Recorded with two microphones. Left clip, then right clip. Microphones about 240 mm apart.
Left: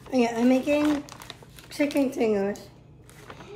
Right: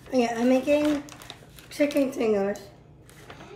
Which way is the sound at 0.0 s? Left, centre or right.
Centre.